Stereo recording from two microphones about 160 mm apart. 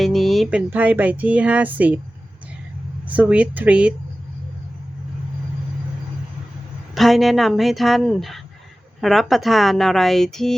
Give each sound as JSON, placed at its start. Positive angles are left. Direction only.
{"t": 0.0, "sound": "a sound", "side_deg": 0}
{"t": 0.7, "sound": "speech", "side_deg": -10}
{"t": 3.1, "sound": "speech", "side_deg": -10}
{"t": 6.9, "sound": "speech", "side_deg": 0}